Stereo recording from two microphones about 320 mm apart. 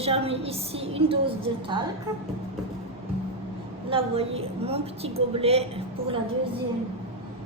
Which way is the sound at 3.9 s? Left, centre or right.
Centre.